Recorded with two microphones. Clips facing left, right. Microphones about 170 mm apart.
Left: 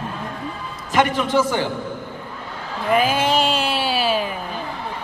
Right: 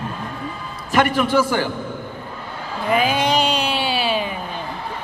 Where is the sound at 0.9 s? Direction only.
20° left (ahead or behind).